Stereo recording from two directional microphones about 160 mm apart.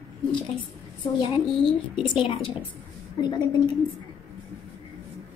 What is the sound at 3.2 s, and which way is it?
Speech, 30° left (ahead or behind).